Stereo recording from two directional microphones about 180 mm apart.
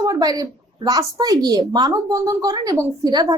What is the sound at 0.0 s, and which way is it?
A woman's voice, 20° right (ahead or behind).